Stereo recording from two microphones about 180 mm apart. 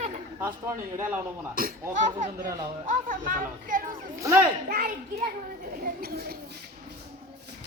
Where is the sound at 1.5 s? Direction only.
55° right (ahead or behind).